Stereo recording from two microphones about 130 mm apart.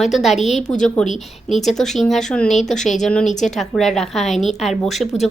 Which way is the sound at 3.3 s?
70° left (ahead or behind).